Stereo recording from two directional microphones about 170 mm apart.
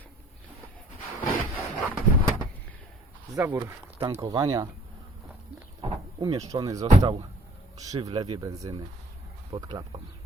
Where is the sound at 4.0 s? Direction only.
20° right (ahead or behind).